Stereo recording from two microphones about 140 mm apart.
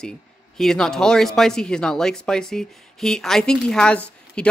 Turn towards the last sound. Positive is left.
turn(degrees=10)  # may be behind; listen again after turning